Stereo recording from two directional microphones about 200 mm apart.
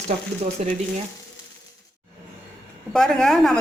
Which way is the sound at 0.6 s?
30° right (ahead or behind).